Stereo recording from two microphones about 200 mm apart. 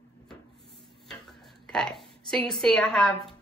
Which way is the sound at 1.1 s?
5° left (ahead or behind).